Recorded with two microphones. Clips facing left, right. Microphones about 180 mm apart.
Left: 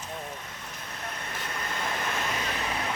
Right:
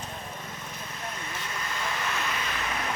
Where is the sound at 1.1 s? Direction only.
55° left (ahead or behind); by 2.8 s 35° left (ahead or behind).